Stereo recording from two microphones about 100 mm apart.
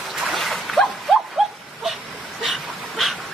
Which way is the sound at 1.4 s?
5° right (ahead or behind).